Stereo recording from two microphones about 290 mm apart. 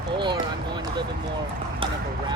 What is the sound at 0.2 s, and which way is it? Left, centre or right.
Speech, centre.